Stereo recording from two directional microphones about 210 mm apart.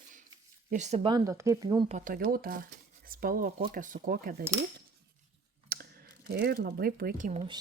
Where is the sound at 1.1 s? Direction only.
15° right (ahead or behind).